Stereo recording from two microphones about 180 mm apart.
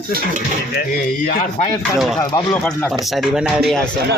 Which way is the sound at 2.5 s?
10° left (ahead or behind).